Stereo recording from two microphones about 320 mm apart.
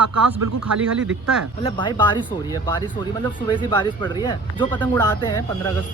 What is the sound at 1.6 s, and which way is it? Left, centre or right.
Speech, centre.